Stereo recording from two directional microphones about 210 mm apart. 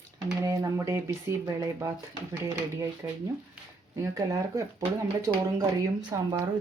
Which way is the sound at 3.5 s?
15° right (ahead or behind).